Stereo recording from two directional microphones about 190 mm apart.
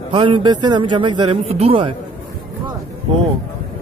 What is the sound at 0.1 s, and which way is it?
A man's voice, 25° right (ahead or behind).